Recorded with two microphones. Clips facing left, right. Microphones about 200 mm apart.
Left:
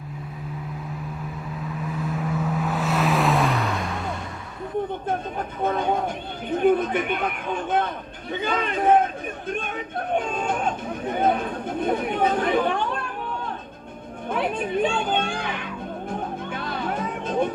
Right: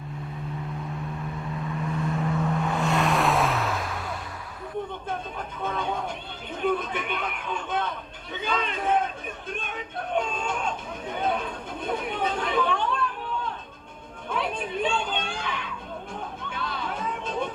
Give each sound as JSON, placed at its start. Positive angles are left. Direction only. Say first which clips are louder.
{"t": 1.6, "sound": "vehicle", "louder": "even", "side_deg": 0}
{"t": 5.0, "sound": "a sound", "louder": "left 6 dB", "side_deg": 50}
{"t": 9.5, "sound": "chatter", "louder": "left 6 dB", "side_deg": 50}
{"t": 14.3, "sound": "music", "louder": "left 4 dB", "side_deg": 50}